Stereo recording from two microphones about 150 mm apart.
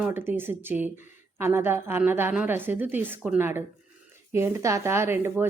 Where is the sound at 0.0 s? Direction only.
15° right (ahead or behind).